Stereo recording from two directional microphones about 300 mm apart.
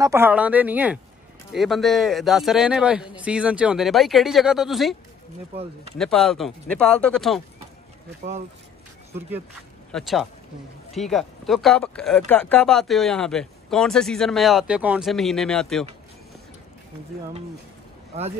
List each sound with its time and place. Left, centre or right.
0.0 s speech: centre
5.9 s speech: centre
9.8 s speech: centre
18.1 s speech: right